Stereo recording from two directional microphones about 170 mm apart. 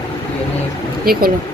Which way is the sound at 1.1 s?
60° right (ahead or behind).